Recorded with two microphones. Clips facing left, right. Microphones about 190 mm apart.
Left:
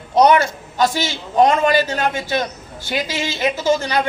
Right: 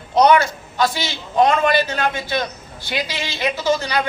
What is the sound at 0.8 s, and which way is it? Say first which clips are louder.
A man's voice: left 2 dB; 45° left (ahead or behind).